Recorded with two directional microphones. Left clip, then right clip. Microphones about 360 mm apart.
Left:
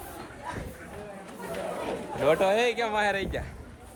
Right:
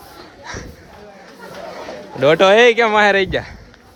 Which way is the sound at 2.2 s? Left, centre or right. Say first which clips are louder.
Right 13 dB; right.